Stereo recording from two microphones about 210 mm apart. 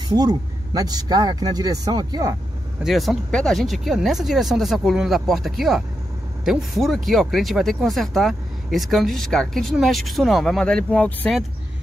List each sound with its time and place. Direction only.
0.1 s speech: 20° right (ahead or behind)
2.8 s speech: centre (ahead or behind)